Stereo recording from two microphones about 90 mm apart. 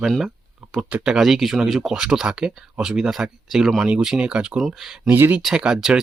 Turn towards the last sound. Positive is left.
turn(degrees=-5)  # may be behind; listen again after turning